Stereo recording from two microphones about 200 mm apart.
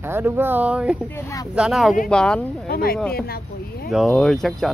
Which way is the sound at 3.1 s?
50° left (ahead or behind).